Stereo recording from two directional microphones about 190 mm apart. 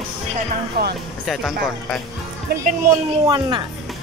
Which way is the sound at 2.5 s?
55° right (ahead or behind).